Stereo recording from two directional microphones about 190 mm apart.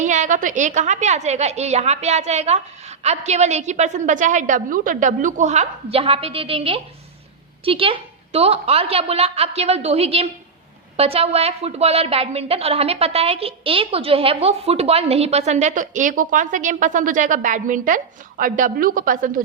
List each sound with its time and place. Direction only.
0.0 s a woman's voice: 40° right (ahead or behind)